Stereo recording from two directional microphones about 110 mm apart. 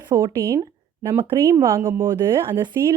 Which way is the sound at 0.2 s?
25° right (ahead or behind).